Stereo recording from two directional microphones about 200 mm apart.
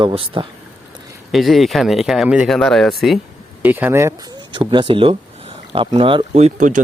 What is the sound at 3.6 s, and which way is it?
Speech, 10° right (ahead or behind).